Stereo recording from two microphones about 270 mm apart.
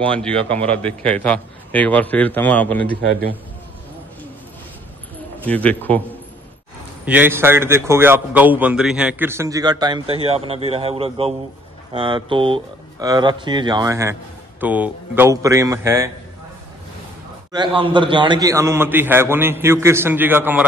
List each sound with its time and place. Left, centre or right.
0.0 s a man's voice: centre
5.4 s a man's voice: centre
7.1 s a man's voice: centre
17.5 s a man's voice: centre